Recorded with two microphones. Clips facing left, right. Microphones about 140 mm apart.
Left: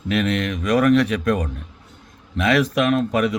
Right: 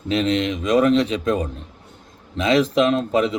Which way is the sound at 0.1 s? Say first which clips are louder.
Right 1 dB; 25° right (ahead or behind).